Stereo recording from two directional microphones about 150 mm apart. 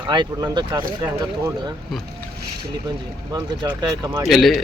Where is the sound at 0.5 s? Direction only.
30° right (ahead or behind).